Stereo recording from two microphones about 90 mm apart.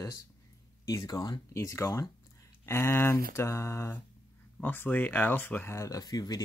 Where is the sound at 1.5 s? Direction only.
35° left (ahead or behind).